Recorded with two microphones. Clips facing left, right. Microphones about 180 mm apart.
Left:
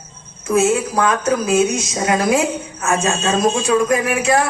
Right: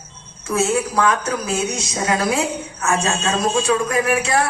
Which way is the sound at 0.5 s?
20° left (ahead or behind).